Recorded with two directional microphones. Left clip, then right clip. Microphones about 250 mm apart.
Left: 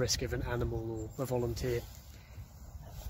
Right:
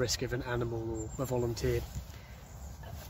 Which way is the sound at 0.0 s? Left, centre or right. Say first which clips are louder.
Right 1 dB; left.